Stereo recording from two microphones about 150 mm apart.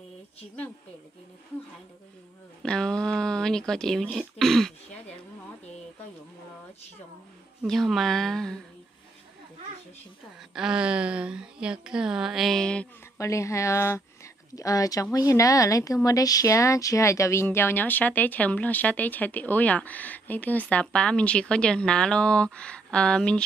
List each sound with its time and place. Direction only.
2.6 s speech: 5° left (ahead or behind)
7.6 s a woman's voice: centre (ahead or behind)
10.5 s a woman's voice: 5° right (ahead or behind)
13.2 s speech: 20° left (ahead or behind)